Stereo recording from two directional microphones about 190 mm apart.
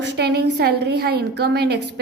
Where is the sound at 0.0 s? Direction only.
60° right (ahead or behind).